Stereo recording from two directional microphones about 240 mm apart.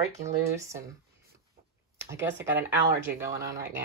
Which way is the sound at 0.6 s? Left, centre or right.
Centre.